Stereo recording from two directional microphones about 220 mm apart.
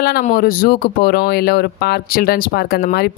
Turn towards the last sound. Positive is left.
turn(degrees=45)  # may be behind; listen again after turning